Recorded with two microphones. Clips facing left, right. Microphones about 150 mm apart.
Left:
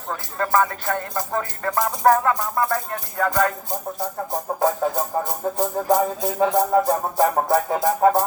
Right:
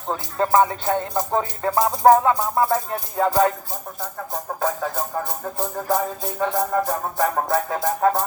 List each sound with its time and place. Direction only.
0.1 s music: 20° right (ahead or behind)
4.3 s music: 20° left (ahead or behind)